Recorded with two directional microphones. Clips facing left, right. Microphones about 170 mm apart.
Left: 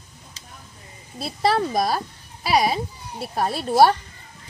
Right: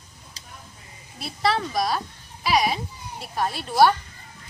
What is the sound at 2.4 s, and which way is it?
Speech, 35° left (ahead or behind).